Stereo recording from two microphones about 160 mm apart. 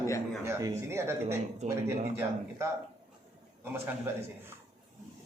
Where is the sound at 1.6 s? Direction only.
45° right (ahead or behind).